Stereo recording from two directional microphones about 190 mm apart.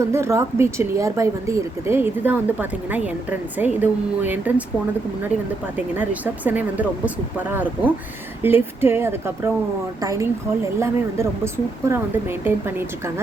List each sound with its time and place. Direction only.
0.0 s speech: 15° right (ahead or behind)
5.7 s speech: 10° right (ahead or behind)